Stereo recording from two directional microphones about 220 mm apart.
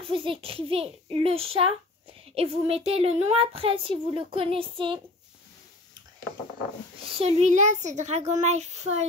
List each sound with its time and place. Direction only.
0.0 s speech: 25° right (ahead or behind)
7.2 s a child's voice: 30° right (ahead or behind)